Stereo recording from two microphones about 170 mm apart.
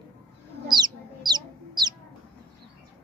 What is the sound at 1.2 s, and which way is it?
Chicken, 25° right (ahead or behind).